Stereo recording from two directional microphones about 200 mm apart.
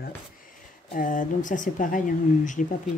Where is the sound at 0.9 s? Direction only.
40° left (ahead or behind).